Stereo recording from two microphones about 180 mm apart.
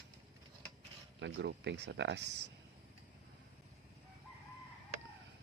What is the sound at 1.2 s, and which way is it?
Speech, 80° right.